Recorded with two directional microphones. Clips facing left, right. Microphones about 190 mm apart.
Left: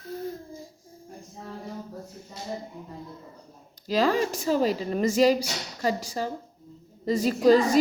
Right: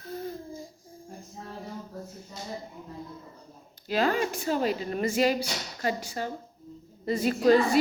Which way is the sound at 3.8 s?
35° left (ahead or behind).